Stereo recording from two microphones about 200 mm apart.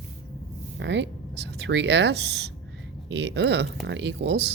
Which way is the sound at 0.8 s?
60° right (ahead or behind).